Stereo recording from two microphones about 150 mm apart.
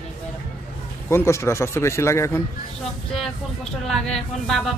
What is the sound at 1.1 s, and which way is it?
A woman's voice, 20° left (ahead or behind).